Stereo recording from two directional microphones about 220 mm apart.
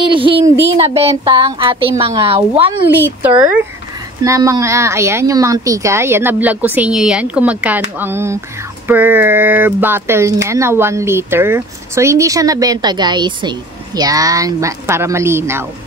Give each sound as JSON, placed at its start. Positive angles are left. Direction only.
{"t": 0.0, "sound": "speech", "side_deg": -25}
{"t": 2.9, "sound": "speech", "side_deg": -10}